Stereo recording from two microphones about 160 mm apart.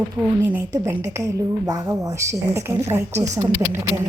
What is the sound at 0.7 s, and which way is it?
A woman's voice, 20° right (ahead or behind).